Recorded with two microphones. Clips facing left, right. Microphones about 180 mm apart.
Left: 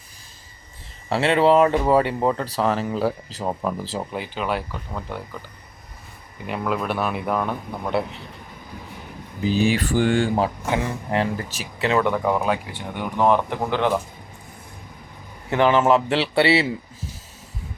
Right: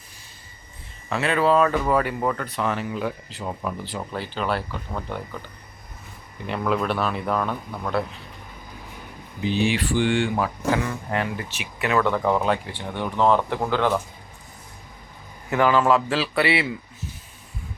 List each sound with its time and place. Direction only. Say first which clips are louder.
1.1 s speech: left 3 dB; 30° left (ahead or behind)
4.1 s speech: right 1 dB; 10° left (ahead or behind)
6.5 s speech: right 1 dB; 5° left (ahead or behind)
9.4 s speech: left 2 dB; 40° left (ahead or behind)
11.3 s speech: left 2 dB; 40° left (ahead or behind)
11.9 s speech: left 1 dB; 20° left (ahead or behind)
12.1 s speech: even; 10° left (ahead or behind)
15.4 s speech: left 2 dB; 25° left (ahead or behind)